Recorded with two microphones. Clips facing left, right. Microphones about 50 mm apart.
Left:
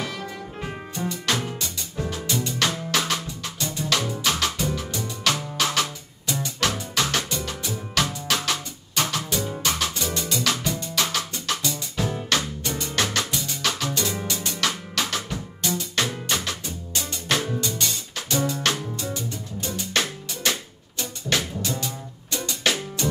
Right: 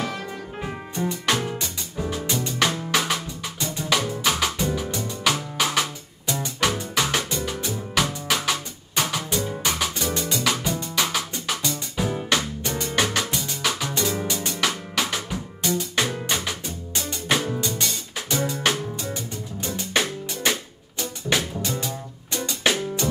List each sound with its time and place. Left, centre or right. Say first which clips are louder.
0.9 s music: right 2 dB; right
1.4 s music: right 2 dB; centre